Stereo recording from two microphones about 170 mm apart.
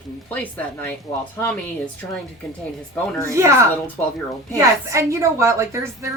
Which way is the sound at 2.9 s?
15° left (ahead or behind).